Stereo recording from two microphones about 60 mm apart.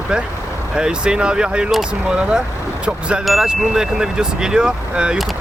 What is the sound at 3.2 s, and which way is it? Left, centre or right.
Chime, centre.